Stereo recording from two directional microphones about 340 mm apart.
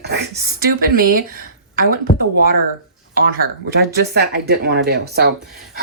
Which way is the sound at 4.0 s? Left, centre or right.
Right.